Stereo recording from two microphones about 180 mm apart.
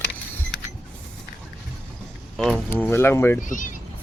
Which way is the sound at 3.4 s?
45° left (ahead or behind).